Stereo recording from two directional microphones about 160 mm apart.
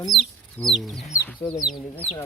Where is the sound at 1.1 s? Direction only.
20° left (ahead or behind).